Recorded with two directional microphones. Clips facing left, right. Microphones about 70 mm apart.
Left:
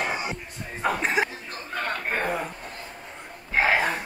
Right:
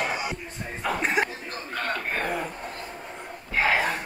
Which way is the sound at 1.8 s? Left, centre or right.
Left.